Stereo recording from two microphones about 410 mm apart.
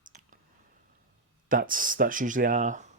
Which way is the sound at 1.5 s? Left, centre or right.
Centre.